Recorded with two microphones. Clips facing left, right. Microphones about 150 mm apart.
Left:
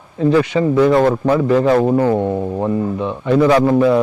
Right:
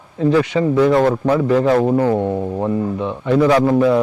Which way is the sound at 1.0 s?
30° left (ahead or behind).